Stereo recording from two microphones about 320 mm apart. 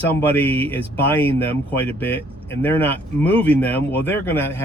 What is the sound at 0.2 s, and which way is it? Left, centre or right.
Speech, centre.